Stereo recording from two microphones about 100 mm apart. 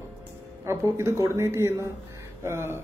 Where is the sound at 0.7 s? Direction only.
30° right (ahead or behind).